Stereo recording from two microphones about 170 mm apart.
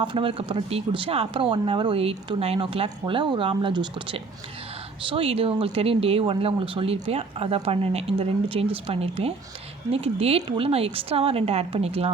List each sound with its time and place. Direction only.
0.0 s speech: 30° right (ahead or behind)